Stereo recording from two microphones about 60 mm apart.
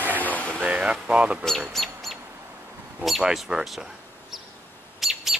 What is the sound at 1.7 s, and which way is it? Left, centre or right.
Bird, centre.